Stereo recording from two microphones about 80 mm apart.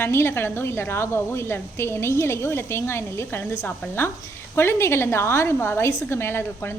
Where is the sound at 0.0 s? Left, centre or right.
Left.